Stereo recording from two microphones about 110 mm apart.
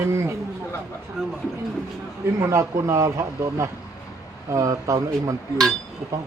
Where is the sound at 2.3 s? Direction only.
30° right (ahead or behind).